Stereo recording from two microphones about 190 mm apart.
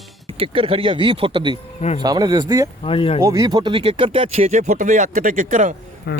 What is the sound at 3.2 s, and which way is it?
Speech, 20° right (ahead or behind).